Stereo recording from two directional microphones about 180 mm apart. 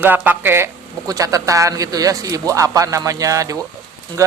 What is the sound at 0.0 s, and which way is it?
Speech, 10° right (ahead or behind).